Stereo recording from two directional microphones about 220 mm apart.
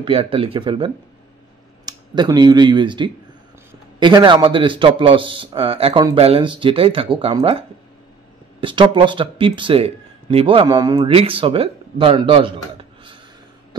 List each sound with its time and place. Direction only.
0.0 s a man's voice: 25° right (ahead or behind)